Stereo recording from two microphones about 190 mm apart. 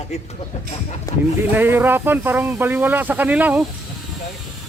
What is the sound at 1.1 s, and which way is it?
Speech, 15° left (ahead or behind).